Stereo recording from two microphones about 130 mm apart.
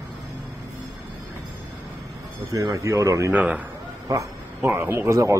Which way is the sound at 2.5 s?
25° right (ahead or behind).